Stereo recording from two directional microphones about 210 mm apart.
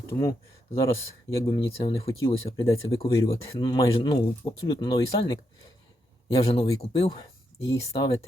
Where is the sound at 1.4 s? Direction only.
25° left (ahead or behind).